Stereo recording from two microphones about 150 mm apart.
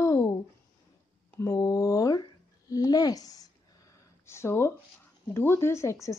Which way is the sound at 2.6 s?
25° left (ahead or behind).